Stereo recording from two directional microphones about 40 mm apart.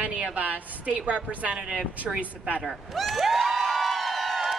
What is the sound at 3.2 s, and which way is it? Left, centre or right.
Music, centre.